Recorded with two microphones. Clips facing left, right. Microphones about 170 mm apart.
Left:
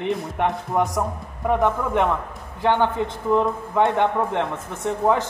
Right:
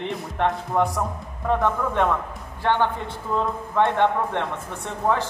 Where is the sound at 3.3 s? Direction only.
15° left (ahead or behind).